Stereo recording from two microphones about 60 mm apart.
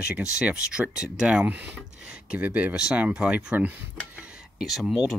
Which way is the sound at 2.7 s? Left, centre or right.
Centre.